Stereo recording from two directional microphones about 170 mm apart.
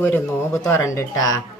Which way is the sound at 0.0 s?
15° left (ahead or behind).